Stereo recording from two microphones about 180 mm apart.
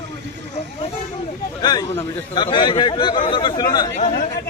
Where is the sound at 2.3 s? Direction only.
25° left (ahead or behind).